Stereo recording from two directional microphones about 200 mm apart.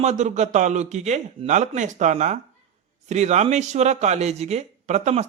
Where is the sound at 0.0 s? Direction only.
35° right (ahead or behind).